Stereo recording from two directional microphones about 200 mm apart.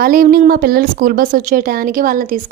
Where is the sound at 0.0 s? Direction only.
45° right (ahead or behind).